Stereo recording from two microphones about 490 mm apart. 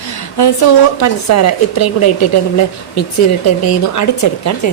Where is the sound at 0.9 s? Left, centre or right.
Left.